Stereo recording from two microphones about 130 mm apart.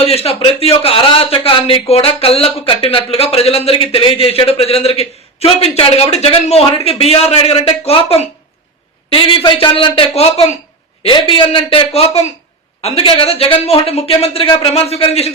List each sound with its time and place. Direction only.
0.0 s speech: 50° left (ahead or behind)
9.0 s speech: 40° left (ahead or behind)